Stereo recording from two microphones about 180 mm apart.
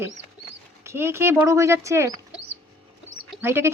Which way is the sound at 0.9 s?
15° right (ahead or behind).